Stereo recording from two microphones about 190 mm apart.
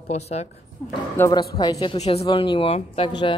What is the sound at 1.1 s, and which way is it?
Speech, 15° left (ahead or behind).